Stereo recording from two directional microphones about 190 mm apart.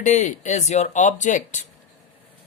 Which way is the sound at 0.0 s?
40° left (ahead or behind).